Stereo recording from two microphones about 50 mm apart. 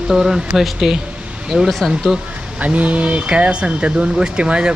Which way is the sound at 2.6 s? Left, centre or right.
Right.